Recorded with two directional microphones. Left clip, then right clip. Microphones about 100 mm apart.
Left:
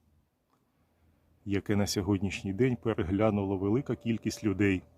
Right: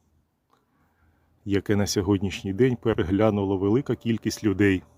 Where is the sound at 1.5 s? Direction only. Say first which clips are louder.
Right 6 dB; 20° right (ahead or behind).